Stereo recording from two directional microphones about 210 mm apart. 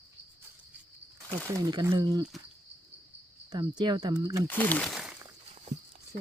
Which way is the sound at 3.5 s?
20° right (ahead or behind).